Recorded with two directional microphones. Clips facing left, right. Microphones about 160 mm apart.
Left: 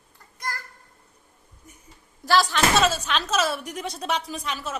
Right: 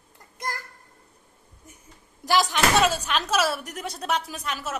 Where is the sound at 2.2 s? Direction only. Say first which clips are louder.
Left 1 dB; 15° right (ahead or behind).